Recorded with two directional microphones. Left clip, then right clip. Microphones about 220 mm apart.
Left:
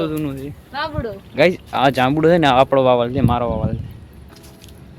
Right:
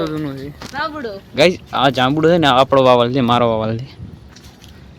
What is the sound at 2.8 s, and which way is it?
Speech, 20° right (ahead or behind).